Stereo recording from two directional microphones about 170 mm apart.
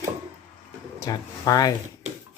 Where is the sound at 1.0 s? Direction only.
20° left (ahead or behind).